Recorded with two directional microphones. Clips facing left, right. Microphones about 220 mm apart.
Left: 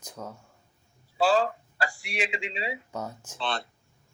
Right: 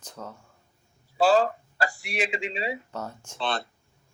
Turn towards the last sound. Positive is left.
turn(degrees=-40)  # may be behind; listen again after turning